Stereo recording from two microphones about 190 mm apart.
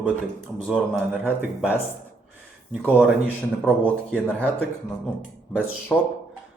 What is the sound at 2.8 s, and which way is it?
Speech, 10° right (ahead or behind).